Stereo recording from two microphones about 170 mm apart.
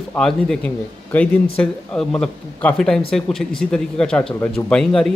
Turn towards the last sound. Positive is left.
turn(degrees=5)  # may be behind; listen again after turning